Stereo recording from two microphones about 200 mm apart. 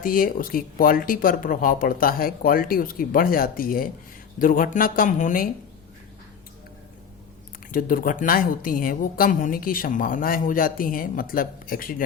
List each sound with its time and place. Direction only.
0.0 s speech: 45° left (ahead or behind)
7.7 s speech: 45° left (ahead or behind)